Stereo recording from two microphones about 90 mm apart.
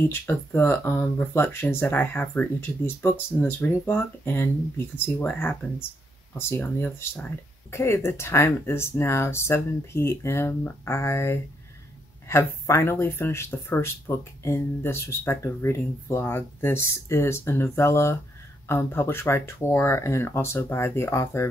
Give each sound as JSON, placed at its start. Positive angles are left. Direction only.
{"t": 0.0, "sound": "speech", "side_deg": 25}